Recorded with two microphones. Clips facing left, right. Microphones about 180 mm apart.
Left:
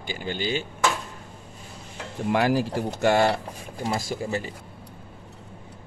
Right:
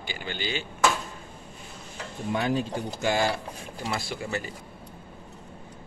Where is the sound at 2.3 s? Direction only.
80° left; by 3.4 s 60° left (ahead or behind).